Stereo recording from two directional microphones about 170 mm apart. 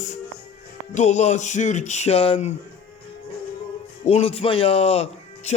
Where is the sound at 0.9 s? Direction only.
45° left (ahead or behind).